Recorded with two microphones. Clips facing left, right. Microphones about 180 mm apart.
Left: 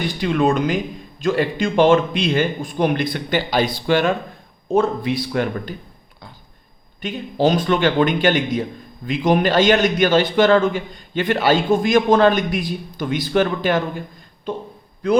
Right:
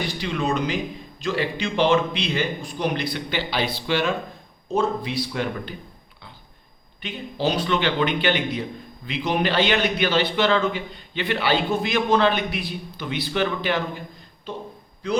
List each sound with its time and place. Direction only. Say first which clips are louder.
0.0 s a man's voice: left 7 dB; 50° left (ahead or behind)
7.0 s a man's voice: left 7 dB; 45° left (ahead or behind)